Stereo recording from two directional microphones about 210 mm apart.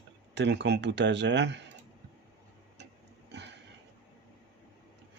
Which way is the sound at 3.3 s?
55° right (ahead or behind).